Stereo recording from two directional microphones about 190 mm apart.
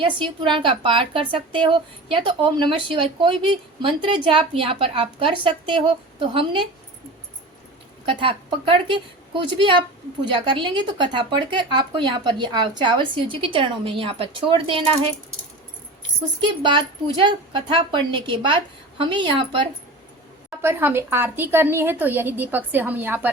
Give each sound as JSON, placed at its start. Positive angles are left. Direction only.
{"t": 0.0, "sound": "a woman's voice", "side_deg": -25}
{"t": 8.0, "sound": "a woman's voice", "side_deg": -25}
{"t": 16.4, "sound": "a woman's voice", "side_deg": -25}
{"t": 20.6, "sound": "a woman's voice", "side_deg": -10}